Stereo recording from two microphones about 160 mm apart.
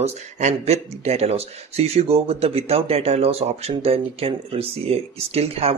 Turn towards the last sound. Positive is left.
turn(degrees=-40)  # may be behind; listen again after turning